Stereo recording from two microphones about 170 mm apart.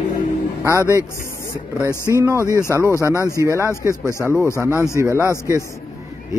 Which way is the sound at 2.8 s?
15° left (ahead or behind).